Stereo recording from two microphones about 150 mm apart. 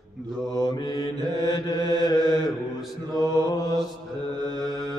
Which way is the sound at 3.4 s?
25° left (ahead or behind).